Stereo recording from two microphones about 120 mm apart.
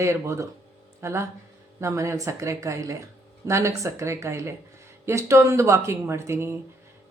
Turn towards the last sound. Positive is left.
turn(degrees=-20)  # may be behind; listen again after turning